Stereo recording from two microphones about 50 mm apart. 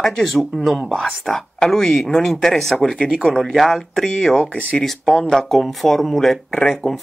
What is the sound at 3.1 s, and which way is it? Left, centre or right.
Speech, centre.